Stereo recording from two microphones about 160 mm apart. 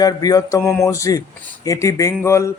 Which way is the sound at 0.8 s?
20° left (ahead or behind).